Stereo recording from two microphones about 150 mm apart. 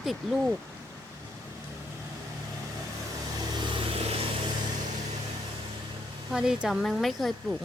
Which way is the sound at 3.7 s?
35° right (ahead or behind).